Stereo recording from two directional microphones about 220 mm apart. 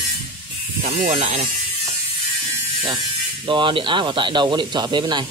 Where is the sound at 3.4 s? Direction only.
20° right (ahead or behind).